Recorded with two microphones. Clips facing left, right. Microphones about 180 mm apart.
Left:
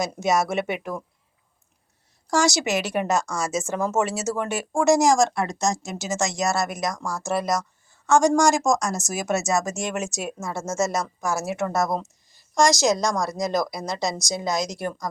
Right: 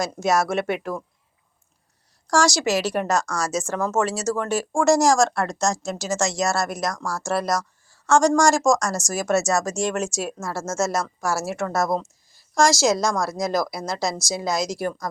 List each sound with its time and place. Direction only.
0.0 s speech: centre (ahead or behind)
2.2 s speech: centre (ahead or behind)
6.9 s speech: 20° left (ahead or behind)
7.3 s speech: centre (ahead or behind)